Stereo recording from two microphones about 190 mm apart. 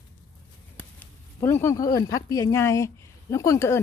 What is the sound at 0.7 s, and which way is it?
A woman's voice, 10° left (ahead or behind).